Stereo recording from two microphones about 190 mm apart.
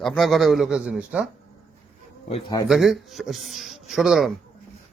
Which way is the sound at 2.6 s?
Centre (ahead or behind).